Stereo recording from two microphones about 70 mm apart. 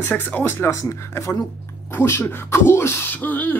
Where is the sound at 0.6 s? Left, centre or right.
Left.